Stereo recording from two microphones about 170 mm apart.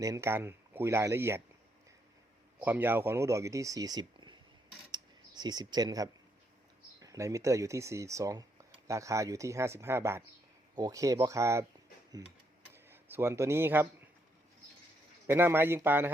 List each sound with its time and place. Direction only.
0.0 s speech: 15° right (ahead or behind)
2.6 s speech: 10° right (ahead or behind)
5.4 s speech: 25° right (ahead or behind)
15.3 s speech: 15° right (ahead or behind)